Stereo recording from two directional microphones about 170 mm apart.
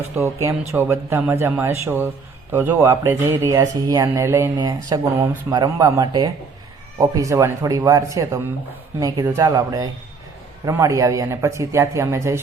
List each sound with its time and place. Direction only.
0.4 s speech: 15° right (ahead or behind)